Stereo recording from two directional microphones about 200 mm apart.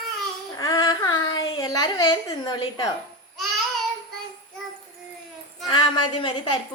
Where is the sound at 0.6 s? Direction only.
20° left (ahead or behind).